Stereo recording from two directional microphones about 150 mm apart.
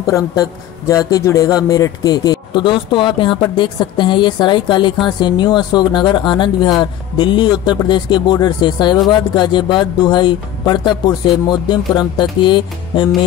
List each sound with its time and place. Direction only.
0.0 s a man's voice: 20° left (ahead or behind)